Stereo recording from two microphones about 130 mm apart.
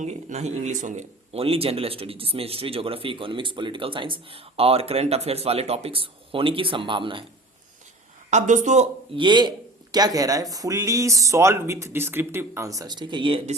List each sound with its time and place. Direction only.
0.0 s a man's voice: 60° right (ahead or behind); by 7.3 s 40° right (ahead or behind)
8.3 s speech: 65° right (ahead or behind)
9.1 s speech: 35° right (ahead or behind)